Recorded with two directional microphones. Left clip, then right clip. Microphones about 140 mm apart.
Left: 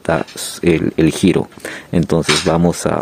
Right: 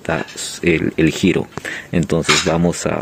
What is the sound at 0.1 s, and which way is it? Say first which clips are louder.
Speech: left 4 dB; 30° left (ahead or behind).